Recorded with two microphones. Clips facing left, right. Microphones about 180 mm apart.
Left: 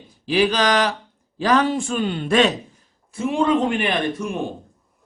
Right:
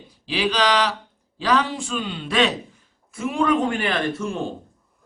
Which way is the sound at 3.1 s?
30° left (ahead or behind).